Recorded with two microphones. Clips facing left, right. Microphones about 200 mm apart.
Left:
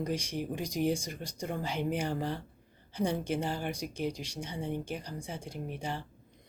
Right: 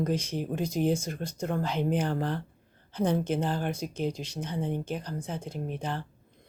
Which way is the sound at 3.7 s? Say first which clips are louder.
Right 3 dB; 15° left (ahead or behind).